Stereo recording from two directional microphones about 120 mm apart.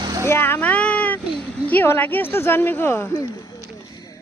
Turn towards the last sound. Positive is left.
turn(degrees=25)  # may be behind; listen again after turning